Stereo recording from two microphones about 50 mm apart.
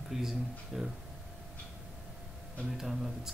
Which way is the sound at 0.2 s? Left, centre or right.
Centre.